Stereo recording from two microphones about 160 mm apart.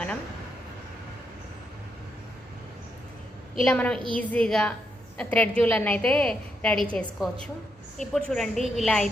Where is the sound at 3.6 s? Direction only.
5° left (ahead or behind).